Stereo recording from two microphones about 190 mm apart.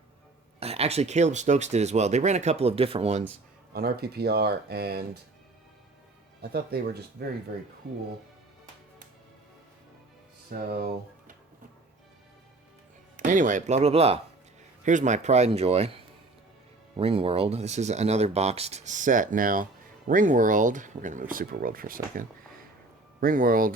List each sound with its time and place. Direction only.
0.6 s speech: 35° right (ahead or behind)
3.7 s speech: 55° right (ahead or behind)
6.4 s speech: 55° right (ahead or behind)
10.5 s speech: 50° right (ahead or behind)
13.1 s speech: 45° right (ahead or behind)